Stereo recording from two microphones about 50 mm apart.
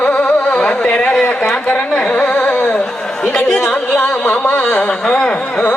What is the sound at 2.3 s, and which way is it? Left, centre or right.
Carnatic music, left.